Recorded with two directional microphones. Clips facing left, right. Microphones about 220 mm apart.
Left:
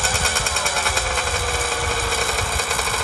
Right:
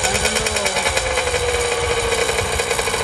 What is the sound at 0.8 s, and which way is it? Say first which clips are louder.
Engine: right 5 dB; centre (ahead or behind).